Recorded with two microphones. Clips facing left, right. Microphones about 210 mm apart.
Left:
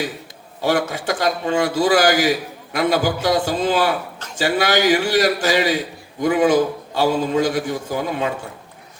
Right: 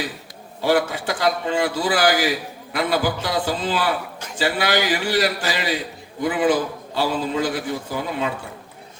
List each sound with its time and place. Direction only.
0.6 s a man's voice: 45° left (ahead or behind)